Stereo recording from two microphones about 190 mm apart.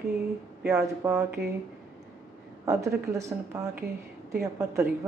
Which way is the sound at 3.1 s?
15° right (ahead or behind).